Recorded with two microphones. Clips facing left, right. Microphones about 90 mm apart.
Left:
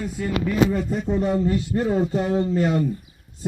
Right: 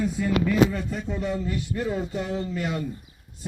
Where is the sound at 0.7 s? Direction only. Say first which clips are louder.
Left 7 dB; 35° left (ahead or behind).